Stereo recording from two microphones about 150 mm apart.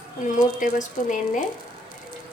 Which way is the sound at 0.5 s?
60° left (ahead or behind).